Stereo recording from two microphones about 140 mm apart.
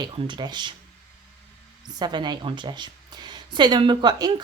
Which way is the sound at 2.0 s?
30° right (ahead or behind).